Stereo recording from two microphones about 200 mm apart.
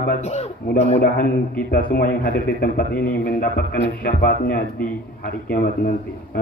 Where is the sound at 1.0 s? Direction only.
45° left (ahead or behind).